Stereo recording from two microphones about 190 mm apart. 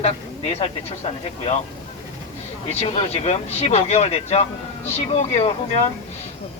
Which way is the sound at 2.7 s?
30° left (ahead or behind).